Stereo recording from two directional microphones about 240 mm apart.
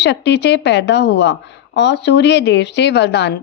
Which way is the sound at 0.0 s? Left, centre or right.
Left.